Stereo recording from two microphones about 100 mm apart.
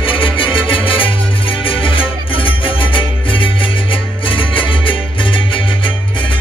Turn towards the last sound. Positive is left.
turn(degrees=60)  # may be behind; listen again after turning